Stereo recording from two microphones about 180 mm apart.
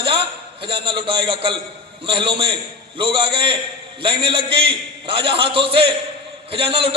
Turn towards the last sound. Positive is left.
turn(degrees=-30)  # may be behind; listen again after turning